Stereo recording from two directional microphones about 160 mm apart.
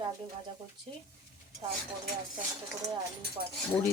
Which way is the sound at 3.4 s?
65° right (ahead or behind).